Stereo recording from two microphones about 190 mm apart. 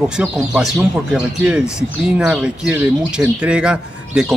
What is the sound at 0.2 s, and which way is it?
Speech, 5° right (ahead or behind).